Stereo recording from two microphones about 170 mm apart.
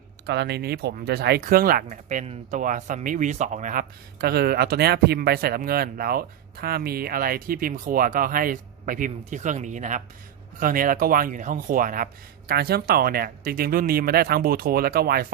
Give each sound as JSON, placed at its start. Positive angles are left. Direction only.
{"t": 0.3, "sound": "speech", "side_deg": -85}
{"t": 1.4, "sound": "speech", "side_deg": -55}
{"t": 12.5, "sound": "speech", "side_deg": -65}